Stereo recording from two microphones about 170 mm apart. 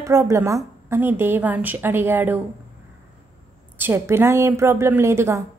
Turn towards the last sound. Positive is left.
turn(degrees=-15)  # may be behind; listen again after turning